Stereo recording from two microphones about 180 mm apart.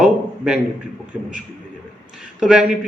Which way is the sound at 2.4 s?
5° right (ahead or behind).